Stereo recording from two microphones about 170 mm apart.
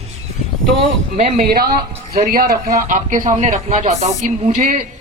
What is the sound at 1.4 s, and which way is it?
Speech, 60° right (ahead or behind).